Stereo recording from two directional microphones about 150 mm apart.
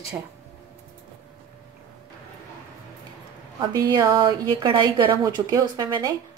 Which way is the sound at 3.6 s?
30° right (ahead or behind).